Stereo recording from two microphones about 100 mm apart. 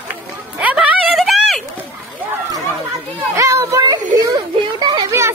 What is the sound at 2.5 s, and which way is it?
Chatter, 30° right (ahead or behind).